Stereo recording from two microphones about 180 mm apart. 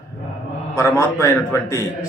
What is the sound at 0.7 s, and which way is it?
Speech, 15° left (ahead or behind).